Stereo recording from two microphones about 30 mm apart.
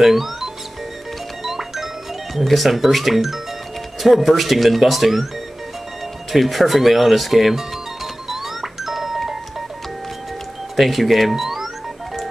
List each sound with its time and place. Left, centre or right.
0.0 s music: centre
2.4 s speech: centre
6.3 s speech: centre
8.3 s a sound: centre
10.8 s speech: centre